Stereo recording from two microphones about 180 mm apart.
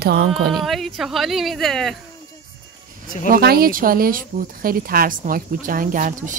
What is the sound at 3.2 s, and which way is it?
Speech, 55° right (ahead or behind).